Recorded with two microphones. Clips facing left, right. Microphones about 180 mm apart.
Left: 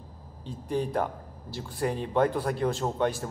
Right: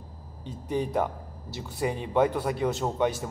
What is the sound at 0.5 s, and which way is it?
Speech, 10° right (ahead or behind).